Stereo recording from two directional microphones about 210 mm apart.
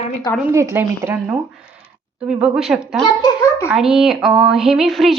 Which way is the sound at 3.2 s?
15° left (ahead or behind).